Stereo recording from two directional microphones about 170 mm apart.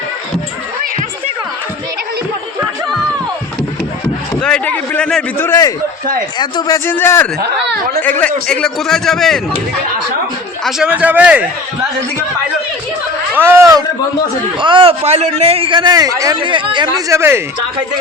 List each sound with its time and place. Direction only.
4.4 s a sound: 5° left (ahead or behind)
6.4 s a man's voice: 25° left (ahead or behind); by 9.4 s centre (ahead or behind)
10.6 s a man's voice: 5° right (ahead or behind)
13.3 s a man's voice: 15° right (ahead or behind)
14.6 s a man's voice: 30° right (ahead or behind)
17.1 s a man's voice: 15° right (ahead or behind)